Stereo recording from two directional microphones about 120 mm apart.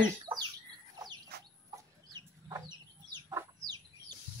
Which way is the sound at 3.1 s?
30° right (ahead or behind).